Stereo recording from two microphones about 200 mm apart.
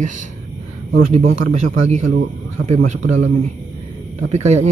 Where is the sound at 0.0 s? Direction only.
40° right (ahead or behind).